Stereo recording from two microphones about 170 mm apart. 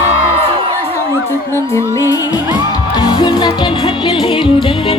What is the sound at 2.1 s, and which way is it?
Music, 20° left (ahead or behind).